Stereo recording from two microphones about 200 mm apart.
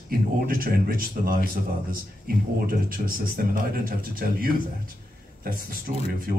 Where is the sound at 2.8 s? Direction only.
45° right (ahead or behind).